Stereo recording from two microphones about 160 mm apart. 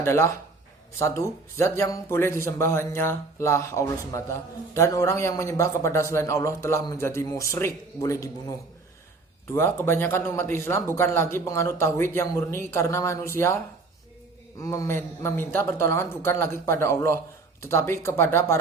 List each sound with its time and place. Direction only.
0.0 s speech: 15° left (ahead or behind)
14.6 s speech: 20° left (ahead or behind)